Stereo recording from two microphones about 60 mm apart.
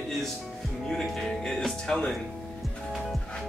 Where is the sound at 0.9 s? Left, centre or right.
Centre.